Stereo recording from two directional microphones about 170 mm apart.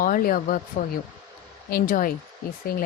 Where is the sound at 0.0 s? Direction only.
55° left (ahead or behind).